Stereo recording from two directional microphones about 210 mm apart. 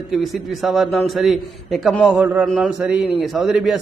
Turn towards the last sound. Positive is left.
turn(degrees=0)  # may be behind; listen again after turning